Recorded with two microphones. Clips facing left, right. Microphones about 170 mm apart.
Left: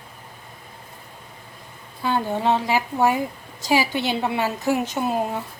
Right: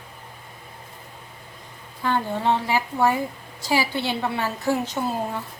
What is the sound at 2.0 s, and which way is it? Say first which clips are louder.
A woman's voice: left 1 dB; 15° left (ahead or behind).